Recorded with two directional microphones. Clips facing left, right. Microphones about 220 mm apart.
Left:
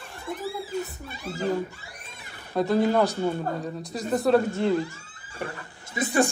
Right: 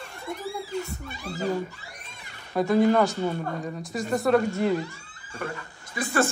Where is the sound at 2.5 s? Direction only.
Centre (ahead or behind).